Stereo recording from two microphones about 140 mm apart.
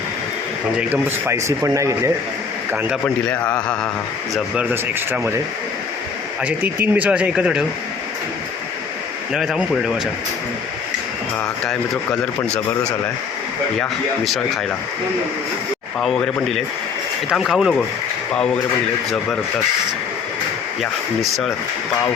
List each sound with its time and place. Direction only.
0.8 s a man's voice: 10° right (ahead or behind)
3.2 s speech: 10° left (ahead or behind)
4.5 s speech: 10° right (ahead or behind)
6.4 s speech: 15° right (ahead or behind)
9.3 s speech: 5° right (ahead or behind)
14.3 s speech: centre (ahead or behind)
16.0 s speech: 5° left (ahead or behind)
20.8 s speech: centre (ahead or behind)